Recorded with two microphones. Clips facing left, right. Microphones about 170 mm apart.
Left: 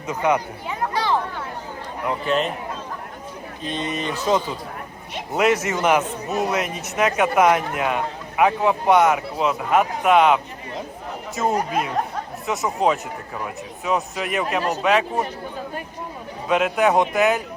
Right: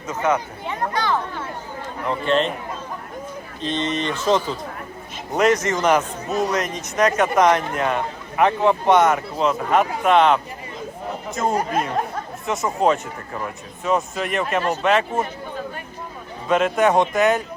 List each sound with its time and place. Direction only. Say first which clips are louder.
0.1 s speech: left 1 dB; 15° left (ahead or behind)
0.9 s a sound: left 1 dB; 30° left (ahead or behind)
2.0 s a man's voice: right 2 dB; 5° left (ahead or behind)
3.6 s a man's voice: right 3 dB; 5° left (ahead or behind)
16.5 s a man's voice: right 1 dB; centre (ahead or behind)